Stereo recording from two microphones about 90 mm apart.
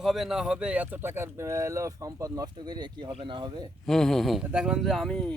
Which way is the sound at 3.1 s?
70° right (ahead or behind).